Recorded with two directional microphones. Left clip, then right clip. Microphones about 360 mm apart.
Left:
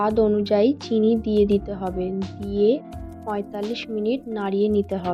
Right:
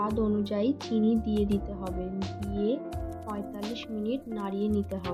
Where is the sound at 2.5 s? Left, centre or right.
Left.